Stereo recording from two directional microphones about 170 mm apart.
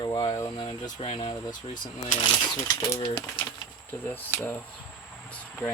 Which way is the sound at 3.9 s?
10° left (ahead or behind).